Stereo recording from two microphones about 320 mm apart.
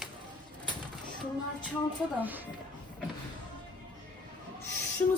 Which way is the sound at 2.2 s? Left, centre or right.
Centre.